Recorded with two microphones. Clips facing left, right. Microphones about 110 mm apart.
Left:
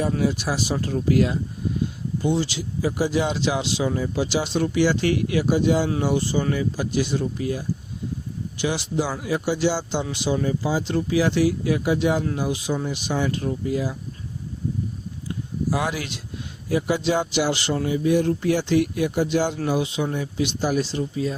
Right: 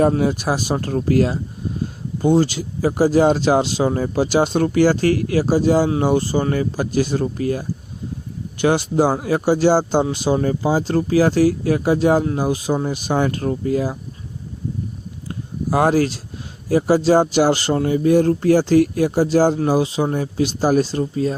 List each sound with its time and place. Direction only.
0.2 s speech: 50° right (ahead or behind)
15.3 s a sound: 45° right (ahead or behind)
16.6 s speech: 40° right (ahead or behind)